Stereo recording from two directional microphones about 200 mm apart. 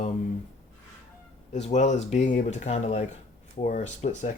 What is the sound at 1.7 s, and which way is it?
Speech, 35° left (ahead or behind).